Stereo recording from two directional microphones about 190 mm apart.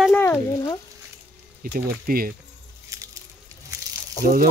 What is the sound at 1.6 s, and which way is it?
Speech, 50° right (ahead or behind).